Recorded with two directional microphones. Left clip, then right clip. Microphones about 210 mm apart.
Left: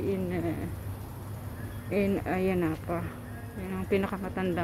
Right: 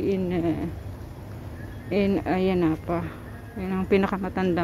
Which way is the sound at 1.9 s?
20° right (ahead or behind).